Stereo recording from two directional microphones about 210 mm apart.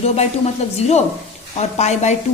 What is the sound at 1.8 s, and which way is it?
Speech, 35° left (ahead or behind).